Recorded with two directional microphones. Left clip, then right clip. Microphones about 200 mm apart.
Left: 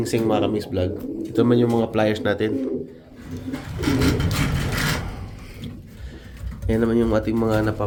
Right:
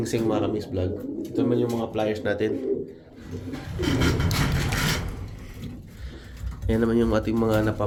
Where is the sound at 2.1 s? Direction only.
15° left (ahead or behind).